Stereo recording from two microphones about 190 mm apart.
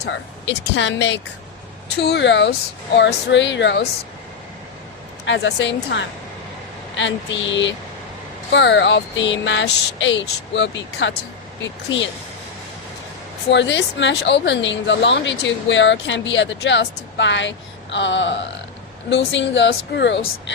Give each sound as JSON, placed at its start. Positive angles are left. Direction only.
{"t": 0.0, "sound": "speech", "side_deg": 70}
{"t": 5.2, "sound": "speech", "side_deg": 70}
{"t": 13.5, "sound": "speech", "side_deg": 70}